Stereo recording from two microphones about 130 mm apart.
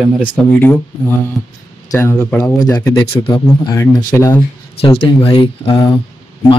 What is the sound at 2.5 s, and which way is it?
Speech, 30° left (ahead or behind).